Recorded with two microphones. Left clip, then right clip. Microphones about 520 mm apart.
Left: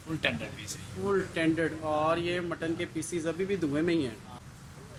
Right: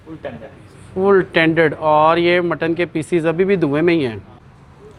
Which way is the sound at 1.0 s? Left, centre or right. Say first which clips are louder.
Right 15 dB; right.